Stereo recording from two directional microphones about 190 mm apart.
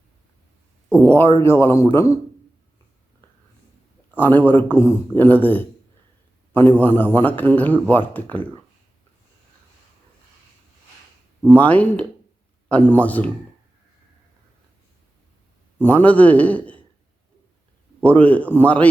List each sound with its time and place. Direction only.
0.9 s a sound: 10° left (ahead or behind)
1.4 s a man's voice: 15° left (ahead or behind)
4.1 s a man's voice: 10° left (ahead or behind)
6.7 s a man's voice: 10° left (ahead or behind)
11.4 s a man's voice: 10° left (ahead or behind)
15.8 s a man's voice: 10° left (ahead or behind)
18.0 s a man's voice: 10° left (ahead or behind)